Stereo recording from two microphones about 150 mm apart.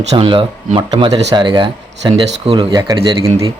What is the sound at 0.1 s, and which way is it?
Speech, 40° right (ahead or behind).